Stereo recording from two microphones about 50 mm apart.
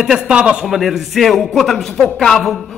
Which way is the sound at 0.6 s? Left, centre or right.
Centre.